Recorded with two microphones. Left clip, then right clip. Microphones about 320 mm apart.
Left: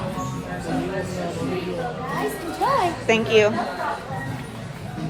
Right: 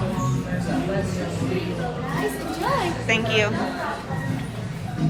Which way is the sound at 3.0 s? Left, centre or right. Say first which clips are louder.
Left 5 dB; centre.